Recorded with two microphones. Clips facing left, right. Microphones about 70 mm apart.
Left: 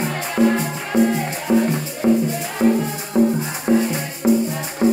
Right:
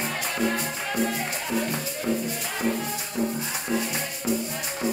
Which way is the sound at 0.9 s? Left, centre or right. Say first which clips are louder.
Left 10 dB; left.